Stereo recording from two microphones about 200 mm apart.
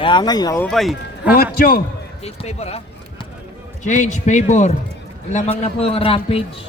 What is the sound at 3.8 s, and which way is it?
A man's voice, 40° left (ahead or behind).